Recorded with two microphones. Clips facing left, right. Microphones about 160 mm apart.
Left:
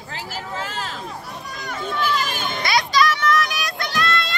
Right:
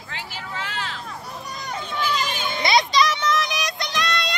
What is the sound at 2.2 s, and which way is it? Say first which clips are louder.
Children playing: left 1 dB; 50° left (ahead or behind).